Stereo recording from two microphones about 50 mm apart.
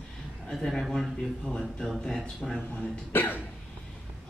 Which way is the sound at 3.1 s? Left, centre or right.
Left.